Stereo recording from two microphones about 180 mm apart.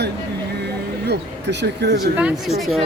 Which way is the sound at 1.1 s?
70° right (ahead or behind).